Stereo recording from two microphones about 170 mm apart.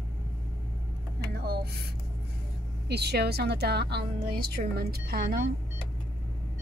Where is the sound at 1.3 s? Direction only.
70° right (ahead or behind).